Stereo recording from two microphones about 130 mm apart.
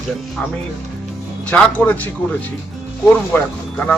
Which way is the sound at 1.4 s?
10° left (ahead or behind).